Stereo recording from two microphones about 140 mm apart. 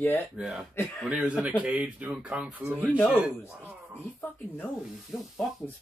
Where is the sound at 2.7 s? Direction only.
10° left (ahead or behind).